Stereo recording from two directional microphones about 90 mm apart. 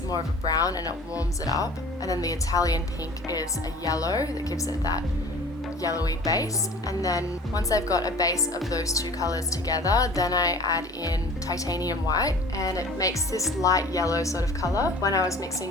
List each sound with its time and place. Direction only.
0.1 s speech: 45° left (ahead or behind)
3.8 s speech: 40° left (ahead or behind)